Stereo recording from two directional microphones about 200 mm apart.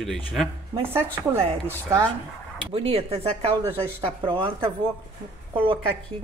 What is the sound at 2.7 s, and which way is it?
Speech, 30° right (ahead or behind).